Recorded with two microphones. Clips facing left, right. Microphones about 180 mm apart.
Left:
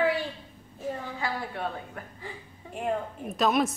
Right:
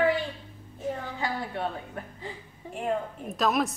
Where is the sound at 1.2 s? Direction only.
20° right (ahead or behind).